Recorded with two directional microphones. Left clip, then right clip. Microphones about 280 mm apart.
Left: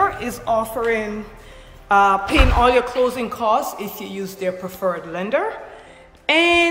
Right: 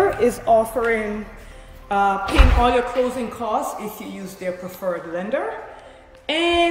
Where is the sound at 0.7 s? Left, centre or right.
Centre.